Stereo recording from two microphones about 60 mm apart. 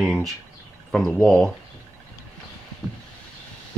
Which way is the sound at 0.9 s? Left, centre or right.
Centre.